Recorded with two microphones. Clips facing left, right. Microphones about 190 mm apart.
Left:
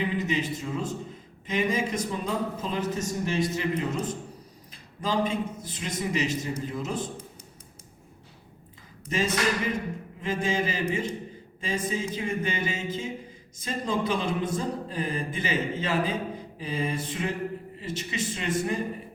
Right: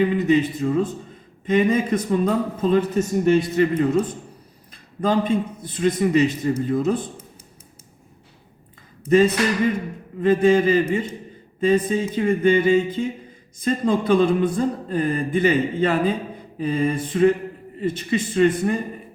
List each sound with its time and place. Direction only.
0.0 s a man's voice: 55° right (ahead or behind)
9.0 s speech: 55° right (ahead or behind)